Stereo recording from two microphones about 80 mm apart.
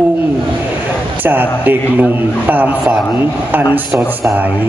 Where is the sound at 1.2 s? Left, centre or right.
Right.